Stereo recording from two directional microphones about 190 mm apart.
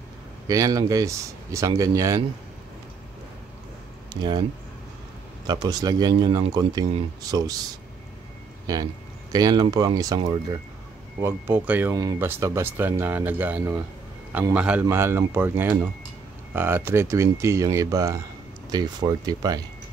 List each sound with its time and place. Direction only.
0.5 s speech: 20° right (ahead or behind)
4.1 s speech: 25° right (ahead or behind)
5.5 s speech: 20° right (ahead or behind)
9.3 s speech: 20° right (ahead or behind)
11.1 s speech: 15° right (ahead or behind)